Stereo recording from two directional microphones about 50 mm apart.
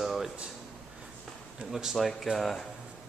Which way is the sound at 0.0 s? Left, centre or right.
Centre.